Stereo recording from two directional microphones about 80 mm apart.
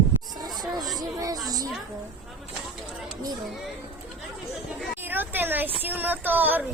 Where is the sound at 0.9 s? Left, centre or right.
Right.